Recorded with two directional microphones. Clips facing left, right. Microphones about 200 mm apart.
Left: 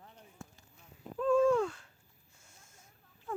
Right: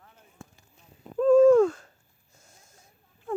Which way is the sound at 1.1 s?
40° right (ahead or behind).